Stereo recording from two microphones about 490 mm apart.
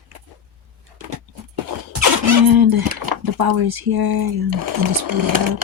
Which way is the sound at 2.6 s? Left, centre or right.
Right.